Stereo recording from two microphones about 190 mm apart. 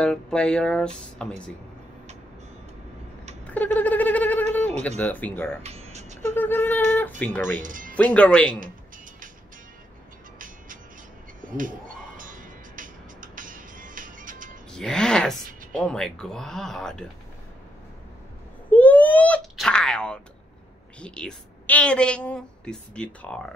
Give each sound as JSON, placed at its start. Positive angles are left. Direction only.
{"t": 0.0, "sound": "a woman's voice", "side_deg": 5}
{"t": 3.4, "sound": "speech", "side_deg": 10}
{"t": 5.6, "sound": "music", "side_deg": -35}
{"t": 6.2, "sound": "a sound", "side_deg": 10}
{"t": 7.2, "sound": "speech", "side_deg": 10}
{"t": 7.6, "sound": "speech", "side_deg": -45}
{"t": 7.9, "sound": "speech", "side_deg": 5}
{"t": 11.4, "sound": "speech", "side_deg": -45}
{"t": 12.2, "sound": "music", "side_deg": -45}
{"t": 14.7, "sound": "a woman's voice", "side_deg": 5}
{"t": 18.7, "sound": "sneeze", "side_deg": 10}
{"t": 21.0, "sound": "a woman's voice", "side_deg": 5}